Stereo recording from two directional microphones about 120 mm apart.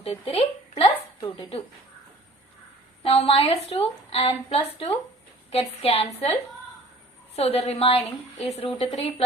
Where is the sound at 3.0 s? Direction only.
55° left (ahead or behind).